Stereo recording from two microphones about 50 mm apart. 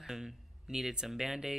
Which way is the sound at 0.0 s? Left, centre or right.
Centre.